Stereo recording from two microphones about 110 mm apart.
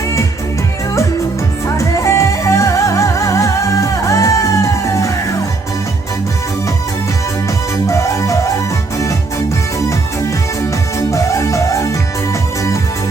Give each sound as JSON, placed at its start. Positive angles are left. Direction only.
{"t": 1.6, "sound": "music", "side_deg": 25}
{"t": 7.9, "sound": "music", "side_deg": 25}
{"t": 11.1, "sound": "music", "side_deg": 30}